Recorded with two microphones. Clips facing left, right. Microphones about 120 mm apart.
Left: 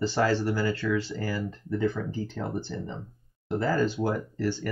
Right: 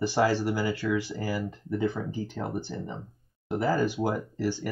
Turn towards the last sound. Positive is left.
turn(degrees=-15)  # may be behind; listen again after turning